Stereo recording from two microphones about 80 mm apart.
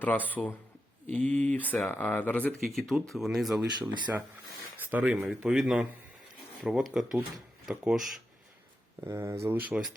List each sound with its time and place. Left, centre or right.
0.3 s speech: left
2.6 s speech: centre
3.8 s speech: centre
5.0 s speech: centre
9.0 s speech: right
9.6 s speech: centre